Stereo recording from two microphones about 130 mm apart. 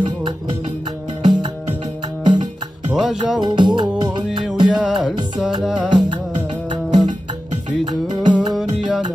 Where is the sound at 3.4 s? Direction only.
35° right (ahead or behind).